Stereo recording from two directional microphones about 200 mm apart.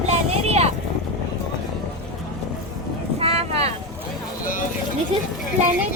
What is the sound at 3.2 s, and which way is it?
Boat, 30° right (ahead or behind).